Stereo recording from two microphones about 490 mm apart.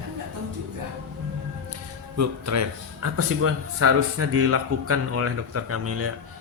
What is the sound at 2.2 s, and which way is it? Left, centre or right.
Speech, right.